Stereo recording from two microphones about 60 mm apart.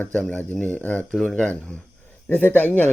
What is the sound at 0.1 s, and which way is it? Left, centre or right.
Speech, left.